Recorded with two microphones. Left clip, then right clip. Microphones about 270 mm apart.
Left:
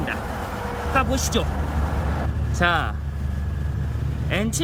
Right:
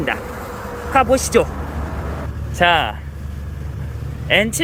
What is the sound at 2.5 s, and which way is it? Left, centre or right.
Speech, centre.